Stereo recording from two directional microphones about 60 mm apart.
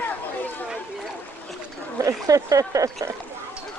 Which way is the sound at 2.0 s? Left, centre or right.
Right.